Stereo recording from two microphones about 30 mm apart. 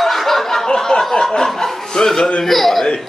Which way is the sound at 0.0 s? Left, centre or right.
Centre.